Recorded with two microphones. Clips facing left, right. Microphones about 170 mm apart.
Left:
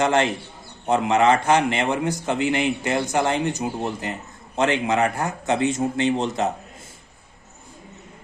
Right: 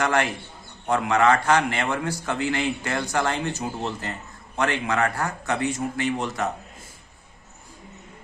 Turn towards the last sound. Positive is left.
turn(degrees=25)  # may be behind; listen again after turning